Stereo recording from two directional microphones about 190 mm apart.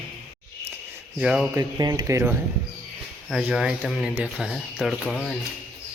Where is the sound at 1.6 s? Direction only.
20° right (ahead or behind); by 5.3 s centre (ahead or behind).